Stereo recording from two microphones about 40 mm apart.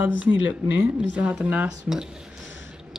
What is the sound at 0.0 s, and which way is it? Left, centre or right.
Speech, right.